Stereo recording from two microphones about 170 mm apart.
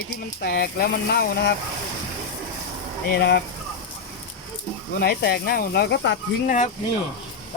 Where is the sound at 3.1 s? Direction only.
65° left (ahead or behind).